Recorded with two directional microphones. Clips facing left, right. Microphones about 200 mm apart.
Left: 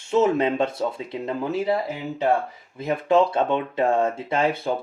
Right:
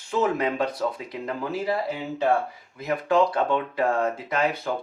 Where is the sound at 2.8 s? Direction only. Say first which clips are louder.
Left 2 dB; 25° left (ahead or behind).